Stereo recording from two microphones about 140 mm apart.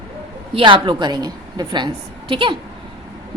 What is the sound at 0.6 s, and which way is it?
A woman's voice, 40° right (ahead or behind).